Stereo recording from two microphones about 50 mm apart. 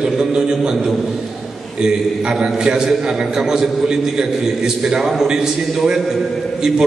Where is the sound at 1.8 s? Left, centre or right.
Centre.